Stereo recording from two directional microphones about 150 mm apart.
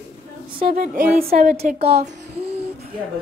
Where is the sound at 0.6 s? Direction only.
70° right (ahead or behind).